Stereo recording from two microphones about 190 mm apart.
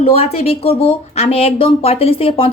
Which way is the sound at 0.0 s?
30° left (ahead or behind).